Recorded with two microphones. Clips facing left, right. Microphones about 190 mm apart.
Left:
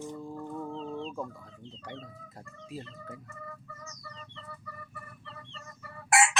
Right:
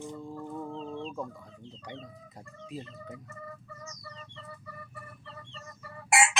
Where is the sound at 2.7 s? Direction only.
Centre (ahead or behind).